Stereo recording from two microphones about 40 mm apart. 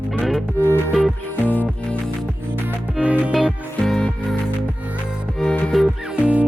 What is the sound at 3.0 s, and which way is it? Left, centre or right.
Music, right.